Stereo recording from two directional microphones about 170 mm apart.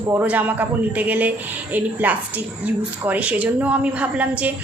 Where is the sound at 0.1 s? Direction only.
10° right (ahead or behind).